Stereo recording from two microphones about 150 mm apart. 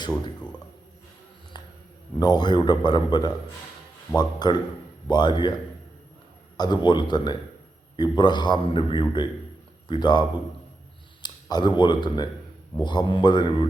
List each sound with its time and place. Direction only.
1.5 s a sound: 30° left (ahead or behind)
2.1 s a man's voice: 30° left (ahead or behind)
6.6 s a man's voice: 30° left (ahead or behind)